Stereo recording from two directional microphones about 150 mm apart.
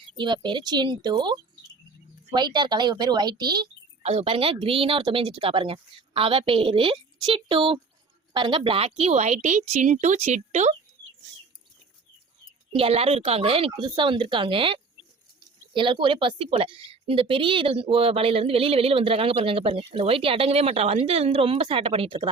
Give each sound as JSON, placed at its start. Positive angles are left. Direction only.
{"t": 0.2, "sound": "a woman's voice", "side_deg": -30}
{"t": 4.0, "sound": "a woman's voice", "side_deg": -40}
{"t": 12.7, "sound": "speech", "side_deg": -40}